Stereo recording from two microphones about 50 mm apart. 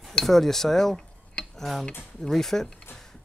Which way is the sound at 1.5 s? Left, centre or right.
Centre.